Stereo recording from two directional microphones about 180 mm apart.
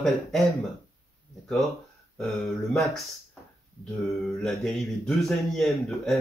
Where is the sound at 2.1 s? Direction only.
Centre (ahead or behind).